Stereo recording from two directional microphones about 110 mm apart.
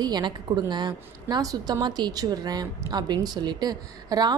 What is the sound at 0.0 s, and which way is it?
A woman's voice, 40° right (ahead or behind).